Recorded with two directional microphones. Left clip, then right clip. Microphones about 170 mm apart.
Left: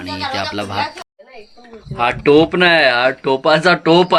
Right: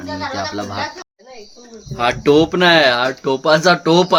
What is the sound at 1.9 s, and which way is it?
Speech, 5° right (ahead or behind).